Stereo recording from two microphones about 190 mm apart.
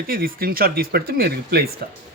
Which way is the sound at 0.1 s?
50° right (ahead or behind).